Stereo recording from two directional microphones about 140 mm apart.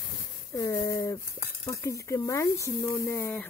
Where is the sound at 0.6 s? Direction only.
20° left (ahead or behind).